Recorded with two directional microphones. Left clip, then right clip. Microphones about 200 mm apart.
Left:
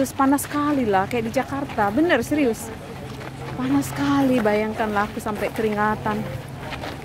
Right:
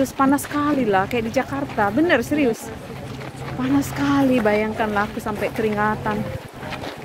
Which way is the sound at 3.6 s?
10° left (ahead or behind).